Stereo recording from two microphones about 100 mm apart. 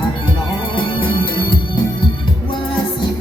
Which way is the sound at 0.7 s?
55° left (ahead or behind).